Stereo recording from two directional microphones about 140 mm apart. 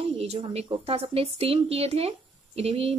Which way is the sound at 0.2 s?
45° right (ahead or behind).